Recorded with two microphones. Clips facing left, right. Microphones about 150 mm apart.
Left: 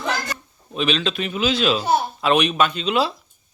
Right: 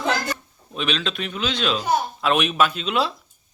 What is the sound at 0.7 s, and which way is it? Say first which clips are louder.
A man's voice: left 4 dB; centre (ahead or behind).